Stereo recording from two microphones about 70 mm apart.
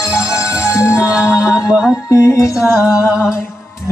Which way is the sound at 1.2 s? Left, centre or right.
Left.